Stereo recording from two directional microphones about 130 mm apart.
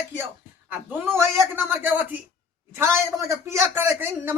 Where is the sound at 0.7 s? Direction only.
15° right (ahead or behind).